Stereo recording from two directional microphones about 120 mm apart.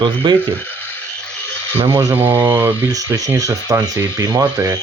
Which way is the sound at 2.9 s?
30° right (ahead or behind).